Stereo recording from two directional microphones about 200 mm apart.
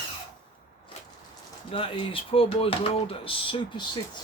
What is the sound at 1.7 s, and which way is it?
Speech, 25° left (ahead or behind).